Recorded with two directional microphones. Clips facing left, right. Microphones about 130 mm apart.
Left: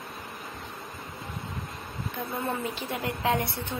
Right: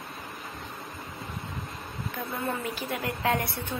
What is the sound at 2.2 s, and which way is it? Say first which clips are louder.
A woman's voice: left 1 dB; 25° left (ahead or behind).